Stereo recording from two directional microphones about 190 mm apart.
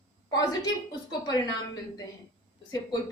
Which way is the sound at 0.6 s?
20° left (ahead or behind).